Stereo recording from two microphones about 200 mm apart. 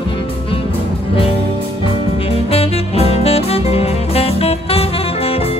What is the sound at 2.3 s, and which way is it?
Music, 30° left (ahead or behind).